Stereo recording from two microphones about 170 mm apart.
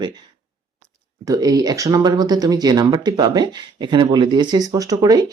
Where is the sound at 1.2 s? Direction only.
20° right (ahead or behind).